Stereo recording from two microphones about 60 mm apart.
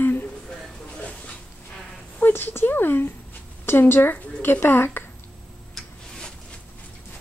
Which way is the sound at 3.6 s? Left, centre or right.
Left.